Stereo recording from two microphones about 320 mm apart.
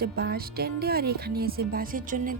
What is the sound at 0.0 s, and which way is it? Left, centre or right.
A woman's voice, right.